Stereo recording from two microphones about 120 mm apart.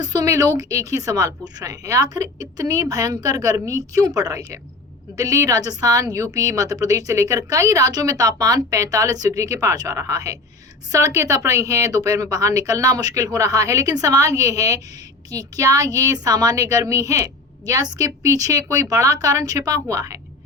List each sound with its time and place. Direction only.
0.1 s speech: 30° right (ahead or behind)